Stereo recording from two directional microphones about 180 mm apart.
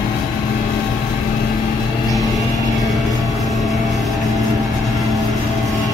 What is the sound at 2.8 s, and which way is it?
Vehicle, centre (ahead or behind).